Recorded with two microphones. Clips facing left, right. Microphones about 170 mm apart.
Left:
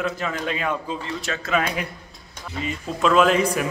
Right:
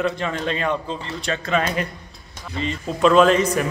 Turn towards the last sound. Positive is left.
turn(degrees=10)  # may be behind; listen again after turning